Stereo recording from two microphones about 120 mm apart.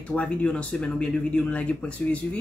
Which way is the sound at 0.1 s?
10° left (ahead or behind).